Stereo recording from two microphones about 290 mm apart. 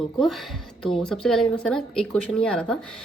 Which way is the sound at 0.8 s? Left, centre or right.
Centre.